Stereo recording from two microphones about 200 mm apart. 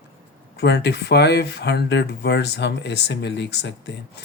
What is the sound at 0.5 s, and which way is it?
Speech, 55° left (ahead or behind).